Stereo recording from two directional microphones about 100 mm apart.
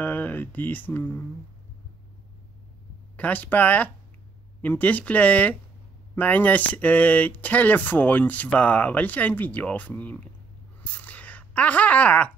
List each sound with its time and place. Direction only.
0.0 s speech: 20° left (ahead or behind)
3.2 s speech: 15° left (ahead or behind)
10.8 s a sound: 15° left (ahead or behind)